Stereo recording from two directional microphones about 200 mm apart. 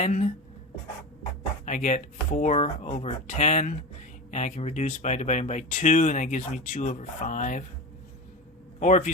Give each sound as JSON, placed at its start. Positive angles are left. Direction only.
{"t": 0.0, "sound": "speech", "side_deg": 35}
{"t": 1.6, "sound": "speech", "side_deg": 40}
{"t": 8.8, "sound": "speech", "side_deg": 40}